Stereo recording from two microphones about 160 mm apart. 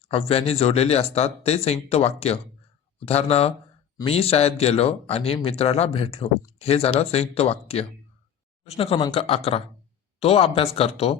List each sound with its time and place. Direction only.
0.1 s speech: 35° left (ahead or behind)